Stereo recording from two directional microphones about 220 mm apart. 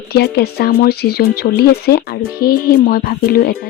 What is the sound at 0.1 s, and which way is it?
Speech, 45° left (ahead or behind).